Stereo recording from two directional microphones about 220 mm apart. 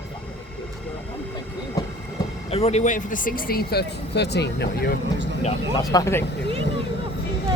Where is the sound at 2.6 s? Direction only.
30° left (ahead or behind); by 4.9 s 50° left (ahead or behind).